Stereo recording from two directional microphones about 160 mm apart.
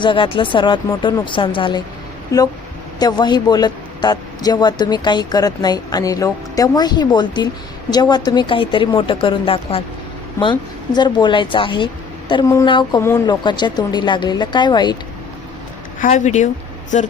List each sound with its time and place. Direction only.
0.0 s a woman's voice: 30° left (ahead or behind)
3.0 s a man's voice: 25° left (ahead or behind)
13.0 s speech: 15° left (ahead or behind)
13.2 s a man's voice: 30° left (ahead or behind)
16.0 s speech: 50° left (ahead or behind)